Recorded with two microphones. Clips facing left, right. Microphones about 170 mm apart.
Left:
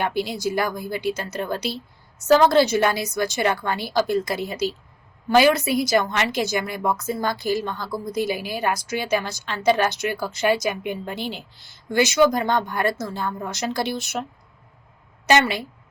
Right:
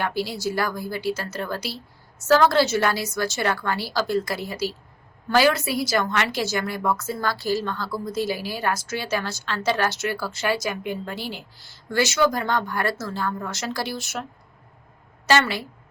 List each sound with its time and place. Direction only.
0.0 s a woman's voice: 20° left (ahead or behind)
15.3 s a woman's voice: 20° left (ahead or behind)